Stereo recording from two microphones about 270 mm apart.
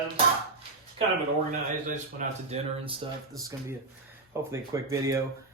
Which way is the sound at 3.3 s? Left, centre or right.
Centre.